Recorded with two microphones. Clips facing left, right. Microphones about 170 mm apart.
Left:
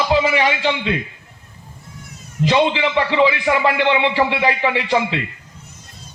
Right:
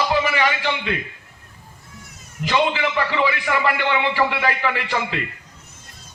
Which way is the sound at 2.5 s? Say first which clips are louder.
Left 3 dB; 20° left (ahead or behind).